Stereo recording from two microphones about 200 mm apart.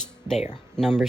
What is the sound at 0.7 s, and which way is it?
Speech, centre (ahead or behind).